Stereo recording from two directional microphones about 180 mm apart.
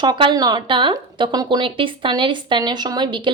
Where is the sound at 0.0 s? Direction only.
25° right (ahead or behind).